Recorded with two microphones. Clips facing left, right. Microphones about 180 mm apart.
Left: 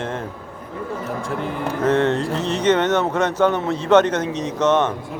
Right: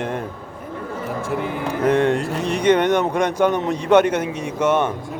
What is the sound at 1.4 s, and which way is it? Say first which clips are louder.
Speech: even; 15° right (ahead or behind).